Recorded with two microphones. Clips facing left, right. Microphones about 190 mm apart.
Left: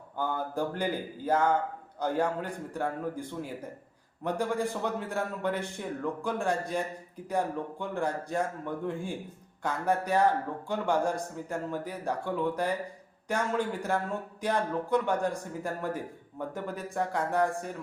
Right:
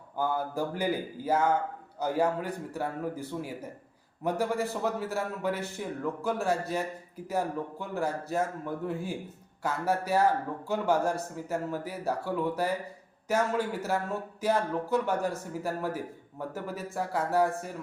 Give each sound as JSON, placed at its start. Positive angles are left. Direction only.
{"t": 0.2, "sound": "a man's voice", "side_deg": -10}